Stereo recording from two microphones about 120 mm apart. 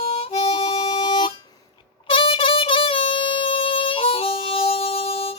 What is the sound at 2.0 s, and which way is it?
Music, 50° left (ahead or behind).